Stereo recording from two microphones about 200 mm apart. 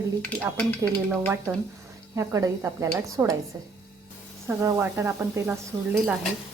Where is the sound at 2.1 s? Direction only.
15° right (ahead or behind).